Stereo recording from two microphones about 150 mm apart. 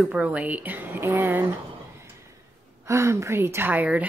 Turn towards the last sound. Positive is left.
turn(degrees=-10)  # may be behind; listen again after turning